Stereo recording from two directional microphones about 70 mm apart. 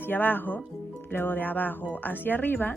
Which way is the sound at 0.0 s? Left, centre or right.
Left.